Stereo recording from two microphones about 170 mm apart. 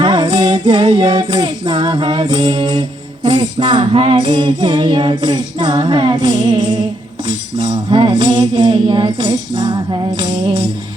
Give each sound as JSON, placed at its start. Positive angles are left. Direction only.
{"t": 0.0, "sound": "music", "side_deg": -25}